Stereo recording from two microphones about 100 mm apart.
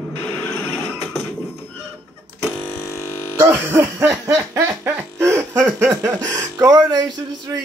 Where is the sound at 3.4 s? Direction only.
20° right (ahead or behind).